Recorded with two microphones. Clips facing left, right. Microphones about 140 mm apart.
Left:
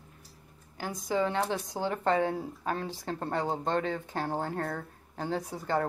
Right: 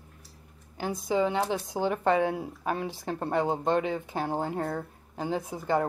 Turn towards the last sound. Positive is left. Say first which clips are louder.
# right 3 dB
turn(degrees=-15)  # may be behind; listen again after turning